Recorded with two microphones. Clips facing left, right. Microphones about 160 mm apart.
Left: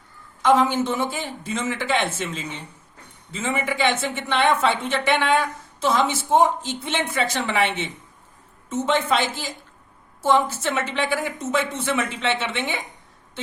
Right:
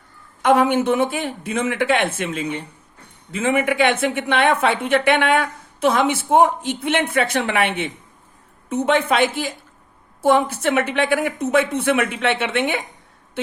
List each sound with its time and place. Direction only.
0.4 s a woman's voice: 60° right (ahead or behind)
8.9 s a woman's voice: 60° right (ahead or behind)